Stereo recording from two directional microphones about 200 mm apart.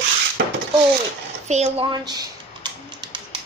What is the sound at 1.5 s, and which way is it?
Typing, 30° right (ahead or behind).